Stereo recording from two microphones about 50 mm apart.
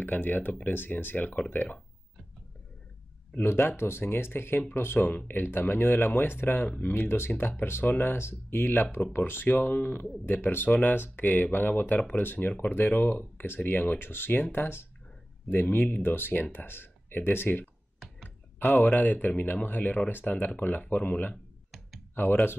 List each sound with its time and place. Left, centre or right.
0.0 s speech: left
3.4 s speech: left
15.5 s speech: left
18.7 s speech: centre
18.9 s speech: left